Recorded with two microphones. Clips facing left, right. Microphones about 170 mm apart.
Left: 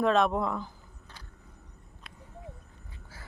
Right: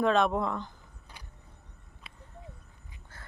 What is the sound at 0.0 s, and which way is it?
Speech, centre (ahead or behind).